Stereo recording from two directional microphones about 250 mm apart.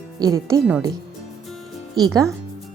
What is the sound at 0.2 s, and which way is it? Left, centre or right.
Speech, centre.